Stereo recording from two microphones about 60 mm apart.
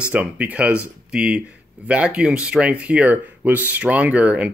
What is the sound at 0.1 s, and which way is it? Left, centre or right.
Speech, right.